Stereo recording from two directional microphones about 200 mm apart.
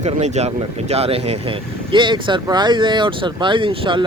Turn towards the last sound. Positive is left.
turn(degrees=-25)  # may be behind; listen again after turning